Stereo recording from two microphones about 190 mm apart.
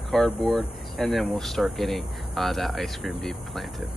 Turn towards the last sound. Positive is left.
turn(degrees=0)  # may be behind; listen again after turning